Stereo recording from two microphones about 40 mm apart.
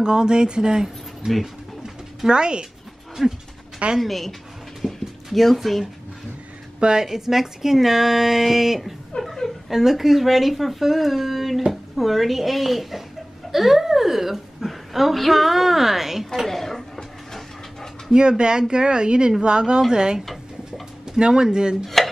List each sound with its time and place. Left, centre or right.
0.0 s speech: centre
1.8 s bird: right
4.0 s speech: centre
4.8 s a sound: centre
6.8 s a woman's voice: right
7.1 s speech: centre
9.2 s a sound: centre
9.7 s a woman's voice: centre
16.4 s a sound: centre
18.4 s speech: right
21.8 s dishes: centre